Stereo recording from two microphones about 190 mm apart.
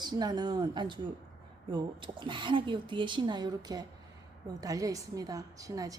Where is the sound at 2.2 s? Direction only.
25° right (ahead or behind).